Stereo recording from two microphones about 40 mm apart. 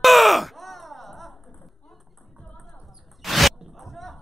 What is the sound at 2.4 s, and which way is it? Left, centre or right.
Music, centre.